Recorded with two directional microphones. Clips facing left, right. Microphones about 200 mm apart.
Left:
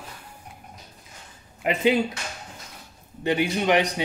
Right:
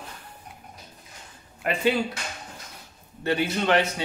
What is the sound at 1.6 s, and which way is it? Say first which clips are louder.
Speech: left 2 dB; 15° left (ahead or behind).